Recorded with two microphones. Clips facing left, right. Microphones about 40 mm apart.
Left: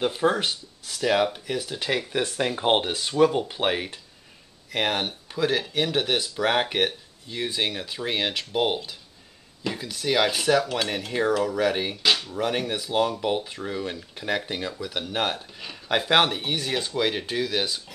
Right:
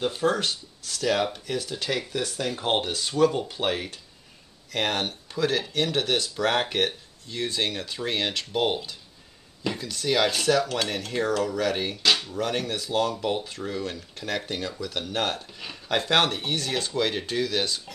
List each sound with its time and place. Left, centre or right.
0.0 s speech: centre
2.1 s speech: left; by 17.9 s centre